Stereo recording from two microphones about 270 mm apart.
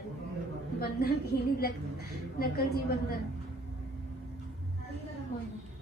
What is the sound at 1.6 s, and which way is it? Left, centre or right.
A woman's voice, left.